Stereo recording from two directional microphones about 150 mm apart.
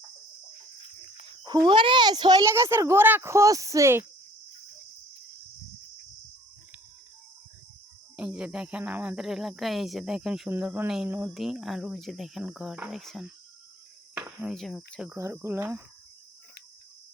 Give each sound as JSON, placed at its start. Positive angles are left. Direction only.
{"t": 1.5, "sound": "speech", "side_deg": -30}
{"t": 8.1, "sound": "speech", "side_deg": -10}
{"t": 14.2, "sound": "cricket", "side_deg": -10}
{"t": 14.5, "sound": "speech", "side_deg": 0}
{"t": 15.1, "sound": "speech", "side_deg": -20}